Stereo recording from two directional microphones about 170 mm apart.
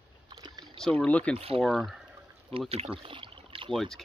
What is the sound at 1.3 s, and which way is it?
Speech, 35° right (ahead or behind).